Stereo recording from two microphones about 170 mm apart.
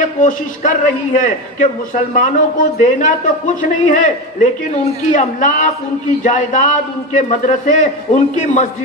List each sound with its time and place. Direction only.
0.0 s a man's voice: 50° left (ahead or behind)